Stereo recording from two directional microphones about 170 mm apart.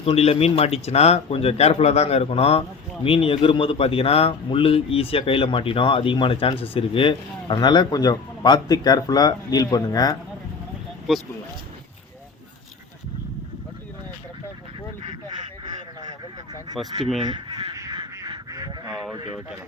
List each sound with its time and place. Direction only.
0.0 s speech: 35° left (ahead or behind)
17.2 s honk: 30° right (ahead or behind)
19.1 s speech: 25° right (ahead or behind)